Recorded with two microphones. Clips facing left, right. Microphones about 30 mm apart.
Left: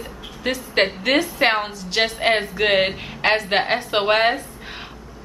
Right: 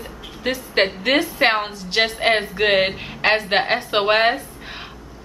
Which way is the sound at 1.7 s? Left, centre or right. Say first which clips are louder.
Right 1 dB; centre.